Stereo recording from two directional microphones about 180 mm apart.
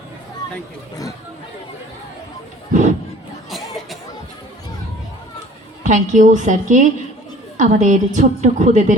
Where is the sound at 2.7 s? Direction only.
45° right (ahead or behind).